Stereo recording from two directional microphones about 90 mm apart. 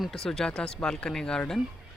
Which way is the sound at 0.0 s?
5° left (ahead or behind).